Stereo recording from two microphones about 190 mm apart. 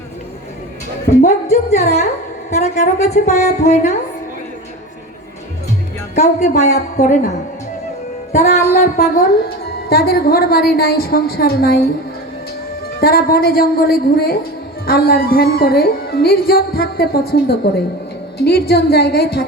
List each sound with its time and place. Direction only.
1.2 s speech: 35° left (ahead or behind)
2.5 s music: 35° left (ahead or behind)
6.1 s music: 35° left (ahead or behind)
9.0 s speech: 50° left (ahead or behind)
12.9 s a woman's voice: 50° left (ahead or behind)